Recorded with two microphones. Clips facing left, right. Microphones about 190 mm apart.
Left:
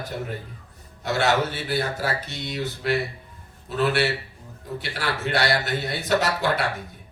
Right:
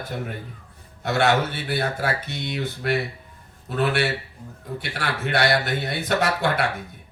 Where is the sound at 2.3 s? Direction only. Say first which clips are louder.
Right 1 dB; 55° right (ahead or behind).